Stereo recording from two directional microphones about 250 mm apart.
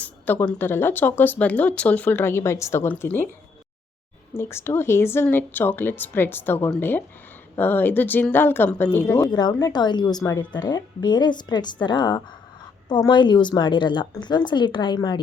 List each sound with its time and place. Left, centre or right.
0.0 s speech: centre
4.4 s a woman's voice: centre